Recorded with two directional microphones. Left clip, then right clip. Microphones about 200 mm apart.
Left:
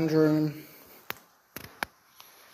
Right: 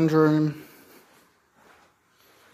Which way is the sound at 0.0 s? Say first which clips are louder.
Right 4 dB; 30° right (ahead or behind).